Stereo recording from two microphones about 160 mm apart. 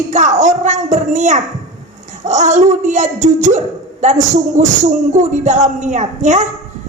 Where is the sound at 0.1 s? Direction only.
50° right (ahead or behind).